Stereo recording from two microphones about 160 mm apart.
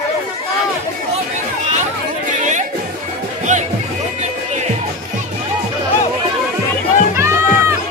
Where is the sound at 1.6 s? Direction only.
50° right (ahead or behind).